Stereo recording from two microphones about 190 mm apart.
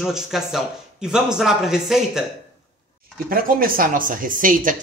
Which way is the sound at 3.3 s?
50° right (ahead or behind).